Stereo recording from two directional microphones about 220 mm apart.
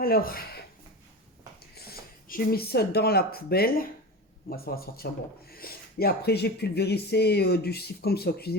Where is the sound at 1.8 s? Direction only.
45° left (ahead or behind).